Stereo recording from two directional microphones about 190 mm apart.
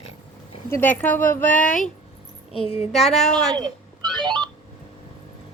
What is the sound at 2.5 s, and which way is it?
Speech, 30° left (ahead or behind).